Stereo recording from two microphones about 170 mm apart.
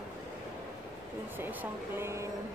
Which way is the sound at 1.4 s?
10° right (ahead or behind).